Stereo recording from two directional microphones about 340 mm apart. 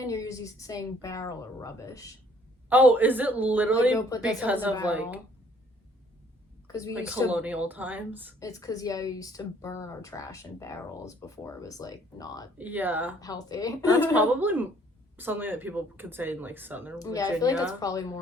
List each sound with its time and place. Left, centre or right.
0.0 s speech: centre
2.6 s speech: centre
6.7 s a woman's voice: centre
6.9 s speech: centre
8.4 s speech: centre
12.5 s speech: centre
13.1 s speech: centre
13.9 s speech: centre
17.0 s speech: centre